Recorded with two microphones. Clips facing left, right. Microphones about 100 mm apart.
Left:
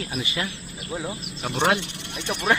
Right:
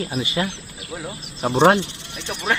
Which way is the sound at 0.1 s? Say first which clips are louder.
Right 5 dB; 30° right (ahead or behind).